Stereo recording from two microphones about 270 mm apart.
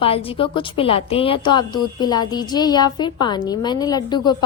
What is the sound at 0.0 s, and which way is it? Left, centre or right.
A woman's voice, left.